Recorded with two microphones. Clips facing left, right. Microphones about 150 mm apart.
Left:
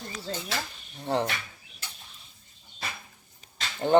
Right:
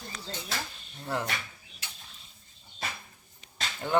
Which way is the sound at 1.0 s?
30° left (ahead or behind).